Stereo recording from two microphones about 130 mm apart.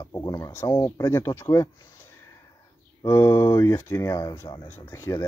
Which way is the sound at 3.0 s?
25° left (ahead or behind).